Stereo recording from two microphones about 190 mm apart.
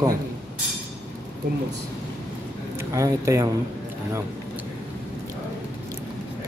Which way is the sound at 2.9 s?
15° right (ahead or behind).